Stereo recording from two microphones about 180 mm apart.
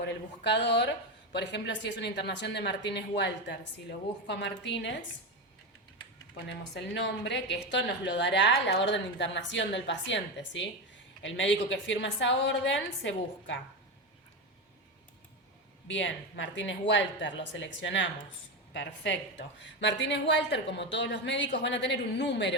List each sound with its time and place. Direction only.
0.0 s a woman's voice: 70° left (ahead or behind)
6.3 s a woman's voice: 70° left (ahead or behind); by 13.6 s 90° left
15.9 s a woman's voice: 90° left